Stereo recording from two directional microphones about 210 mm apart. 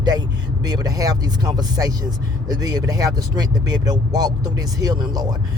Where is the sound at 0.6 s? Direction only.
20° right (ahead or behind).